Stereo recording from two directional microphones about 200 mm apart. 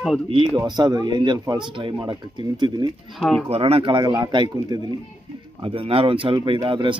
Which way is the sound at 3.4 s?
30° right (ahead or behind).